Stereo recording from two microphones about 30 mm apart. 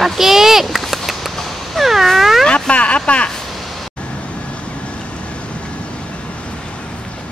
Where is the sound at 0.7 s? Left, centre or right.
Centre.